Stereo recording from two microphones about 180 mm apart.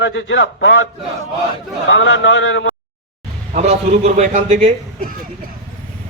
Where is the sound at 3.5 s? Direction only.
40° right (ahead or behind).